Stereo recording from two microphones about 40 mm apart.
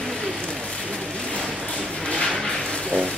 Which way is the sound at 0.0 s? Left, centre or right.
Centre.